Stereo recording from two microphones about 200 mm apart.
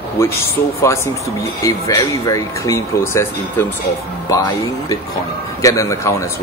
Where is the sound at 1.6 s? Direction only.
15° left (ahead or behind).